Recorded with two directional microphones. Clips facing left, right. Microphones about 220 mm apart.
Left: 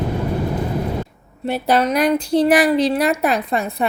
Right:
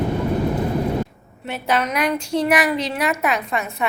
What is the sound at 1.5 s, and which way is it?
A woman's voice, 35° left (ahead or behind).